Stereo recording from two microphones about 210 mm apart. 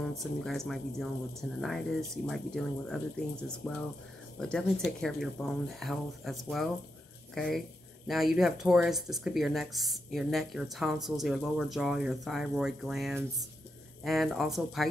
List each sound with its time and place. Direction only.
0.2 s speech: centre (ahead or behind)